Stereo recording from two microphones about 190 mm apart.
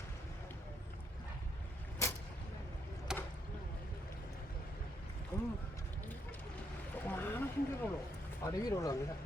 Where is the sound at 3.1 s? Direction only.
5° right (ahead or behind).